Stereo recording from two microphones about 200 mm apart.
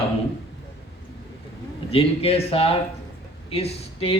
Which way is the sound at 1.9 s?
30° left (ahead or behind).